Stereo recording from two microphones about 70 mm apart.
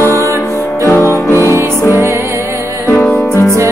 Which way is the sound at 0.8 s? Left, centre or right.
Left.